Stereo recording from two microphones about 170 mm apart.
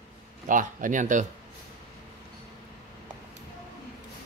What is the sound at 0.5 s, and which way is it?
Speech, 50° right (ahead or behind).